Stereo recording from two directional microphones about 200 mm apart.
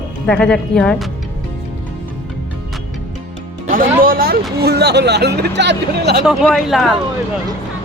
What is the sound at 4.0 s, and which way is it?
Speech, 45° right (ahead or behind).